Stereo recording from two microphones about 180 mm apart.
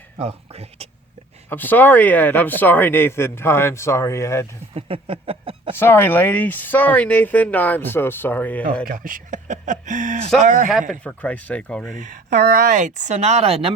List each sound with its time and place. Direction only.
0.2 s speech: 35° right (ahead or behind)
1.5 s a man's voice: 10° left (ahead or behind)
4.7 s a sound: 30° right (ahead or behind)
5.7 s a man's voice: 10° left (ahead or behind)
8.9 s speech: 50° right (ahead or behind)
10.7 s speech: centre (ahead or behind)
11.9 s speech: 45° right (ahead or behind)